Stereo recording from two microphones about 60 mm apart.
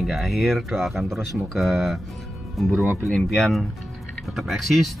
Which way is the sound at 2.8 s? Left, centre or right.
Right.